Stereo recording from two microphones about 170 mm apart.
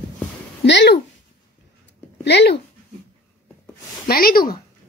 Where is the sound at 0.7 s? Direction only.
90° left.